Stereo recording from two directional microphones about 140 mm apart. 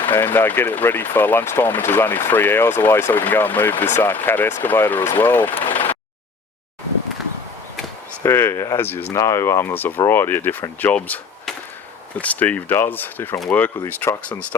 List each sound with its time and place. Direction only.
0.1 s speech: 15° left (ahead or behind)
8.2 s speech: 15° left (ahead or behind)